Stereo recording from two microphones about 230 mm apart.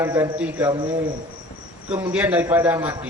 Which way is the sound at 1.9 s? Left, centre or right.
Centre.